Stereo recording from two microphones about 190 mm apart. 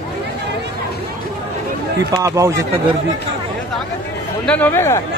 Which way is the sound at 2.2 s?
15° right (ahead or behind).